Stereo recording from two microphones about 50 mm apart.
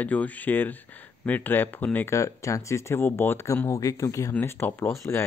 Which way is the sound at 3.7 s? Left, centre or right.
Left.